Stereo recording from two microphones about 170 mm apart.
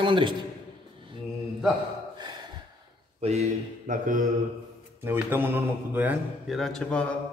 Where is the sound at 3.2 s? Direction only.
40° right (ahead or behind).